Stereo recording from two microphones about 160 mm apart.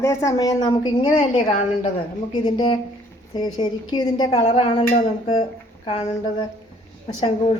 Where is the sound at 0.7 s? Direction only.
35° left (ahead or behind).